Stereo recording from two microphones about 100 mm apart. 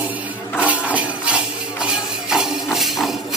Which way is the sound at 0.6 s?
15° right (ahead or behind).